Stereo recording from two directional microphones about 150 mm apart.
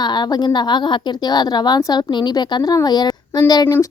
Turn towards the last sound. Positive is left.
turn(degrees=25)  # may be behind; listen again after turning